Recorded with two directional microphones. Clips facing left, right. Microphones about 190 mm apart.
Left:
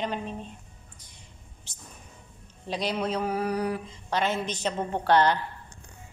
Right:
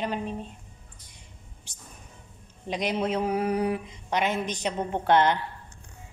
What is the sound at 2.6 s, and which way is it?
Mantra, 15° right (ahead or behind).